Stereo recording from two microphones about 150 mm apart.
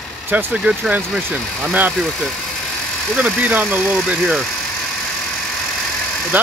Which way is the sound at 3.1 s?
10° right (ahead or behind).